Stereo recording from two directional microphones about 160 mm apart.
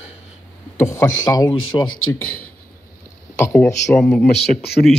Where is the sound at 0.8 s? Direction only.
20° left (ahead or behind).